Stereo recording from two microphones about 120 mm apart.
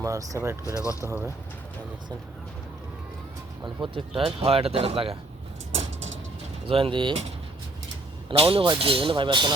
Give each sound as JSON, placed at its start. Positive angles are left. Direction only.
{"t": 0.0, "sound": "speech", "side_deg": -25}
{"t": 0.6, "sound": "speech", "side_deg": 25}
{"t": 3.6, "sound": "speech", "side_deg": -45}
{"t": 6.7, "sound": "speech", "side_deg": -50}
{"t": 8.3, "sound": "speech", "side_deg": -50}